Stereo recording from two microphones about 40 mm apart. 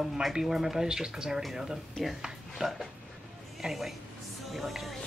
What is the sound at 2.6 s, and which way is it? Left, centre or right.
Speech, right.